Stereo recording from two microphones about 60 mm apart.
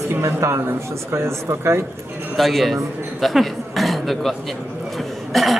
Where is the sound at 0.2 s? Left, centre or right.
Right.